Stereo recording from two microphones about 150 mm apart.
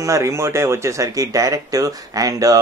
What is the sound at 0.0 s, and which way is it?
Speech, 20° right (ahead or behind).